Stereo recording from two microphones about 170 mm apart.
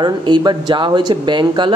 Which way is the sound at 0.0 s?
25° right (ahead or behind).